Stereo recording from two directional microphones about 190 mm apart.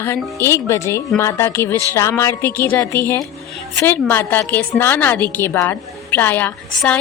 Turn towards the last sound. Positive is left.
turn(degrees=10)  # may be behind; listen again after turning